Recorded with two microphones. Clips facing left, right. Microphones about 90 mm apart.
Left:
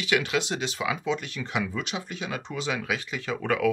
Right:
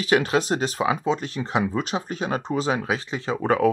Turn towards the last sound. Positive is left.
turn(degrees=-35)  # may be behind; listen again after turning